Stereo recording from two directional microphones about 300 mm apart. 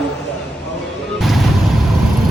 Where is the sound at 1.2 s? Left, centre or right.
Centre.